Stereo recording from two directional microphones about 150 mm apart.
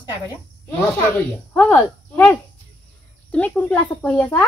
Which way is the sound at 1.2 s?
15° left (ahead or behind).